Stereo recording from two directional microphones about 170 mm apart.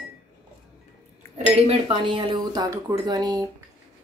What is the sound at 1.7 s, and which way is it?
Speech, 30° right (ahead or behind).